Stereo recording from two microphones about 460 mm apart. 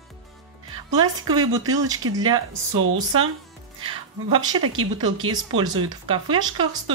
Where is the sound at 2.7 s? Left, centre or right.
Right.